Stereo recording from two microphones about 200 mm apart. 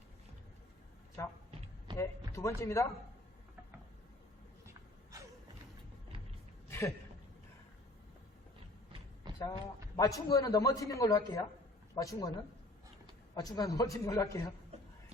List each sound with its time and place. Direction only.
1.2 s a man's voice: 15° left (ahead or behind)
6.7 s a sound: 15° left (ahead or behind)
9.4 s a man's voice: 20° left (ahead or behind)
13.3 s a man's voice: 20° left (ahead or behind)